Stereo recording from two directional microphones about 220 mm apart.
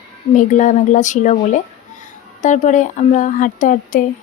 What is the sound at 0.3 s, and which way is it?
Speech, 35° left (ahead or behind).